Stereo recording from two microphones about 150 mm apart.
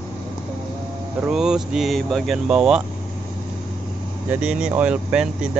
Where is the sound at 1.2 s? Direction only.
5° right (ahead or behind).